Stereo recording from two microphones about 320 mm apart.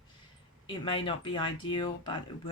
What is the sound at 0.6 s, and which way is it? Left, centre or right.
Speech, centre.